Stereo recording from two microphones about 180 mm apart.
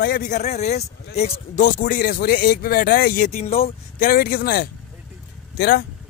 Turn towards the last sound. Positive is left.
turn(degrees=65)  # may be behind; listen again after turning